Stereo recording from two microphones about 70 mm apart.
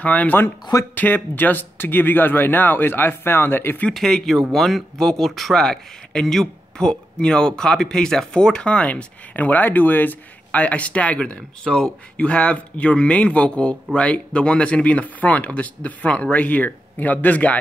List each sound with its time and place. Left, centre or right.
0.0 s speech: left
3.9 s speech: centre
9.3 s speech: left